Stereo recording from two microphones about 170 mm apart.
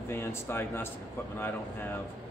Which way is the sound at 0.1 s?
15° left (ahead or behind).